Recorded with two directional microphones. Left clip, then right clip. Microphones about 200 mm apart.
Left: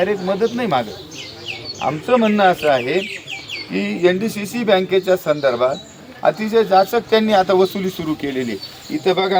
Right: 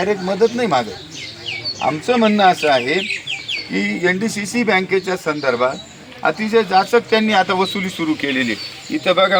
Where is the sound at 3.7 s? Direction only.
25° left (ahead or behind); by 6.9 s 45° left (ahead or behind).